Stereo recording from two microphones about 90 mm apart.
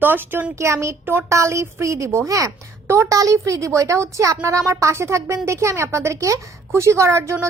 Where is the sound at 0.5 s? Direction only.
30° right (ahead or behind).